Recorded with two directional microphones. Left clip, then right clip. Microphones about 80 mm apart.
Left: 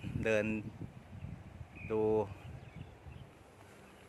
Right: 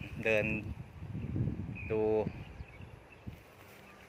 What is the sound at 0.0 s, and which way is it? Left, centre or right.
Vehicle, left.